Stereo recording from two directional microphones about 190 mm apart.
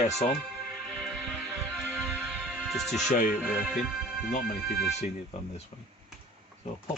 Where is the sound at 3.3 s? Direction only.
5° right (ahead or behind).